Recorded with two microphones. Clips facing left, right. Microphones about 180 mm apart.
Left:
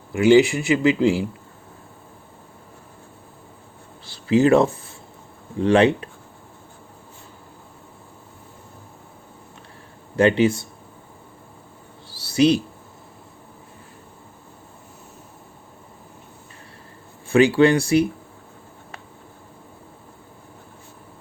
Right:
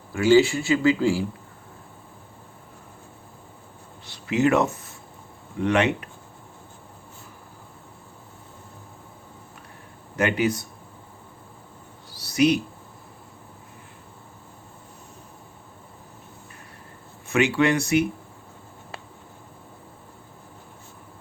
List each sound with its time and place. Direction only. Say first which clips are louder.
0.1 s speech: left 3 dB; 20° left (ahead or behind)
4.0 s speech: left 5 dB; 30° left (ahead or behind)
10.2 s speech: left 6 dB; 30° left (ahead or behind)
12.0 s a sound: left 3 dB; 30° left (ahead or behind)
17.2 s speech: left 6 dB; 30° left (ahead or behind)